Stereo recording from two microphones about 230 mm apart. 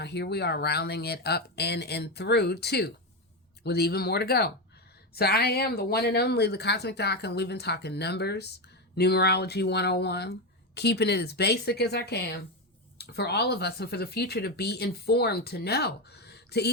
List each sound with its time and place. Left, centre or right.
0.0 s speech: left